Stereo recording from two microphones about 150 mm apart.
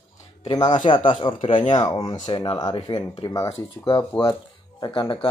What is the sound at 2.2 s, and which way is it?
Speech, 40° left (ahead or behind).